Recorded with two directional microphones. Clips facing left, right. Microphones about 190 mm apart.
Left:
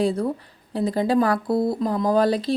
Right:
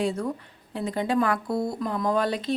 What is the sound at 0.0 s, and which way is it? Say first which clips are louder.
A woman's voice: left 5 dB; 35° left (ahead or behind).